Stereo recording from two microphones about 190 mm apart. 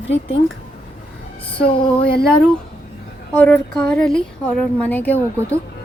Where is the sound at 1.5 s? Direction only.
55° left (ahead or behind).